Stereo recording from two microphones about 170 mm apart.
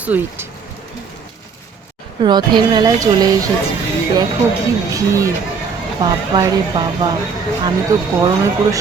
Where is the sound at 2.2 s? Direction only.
25° right (ahead or behind).